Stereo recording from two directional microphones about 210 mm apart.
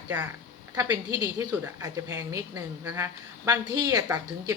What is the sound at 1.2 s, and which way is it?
A woman's voice, 15° right (ahead or behind).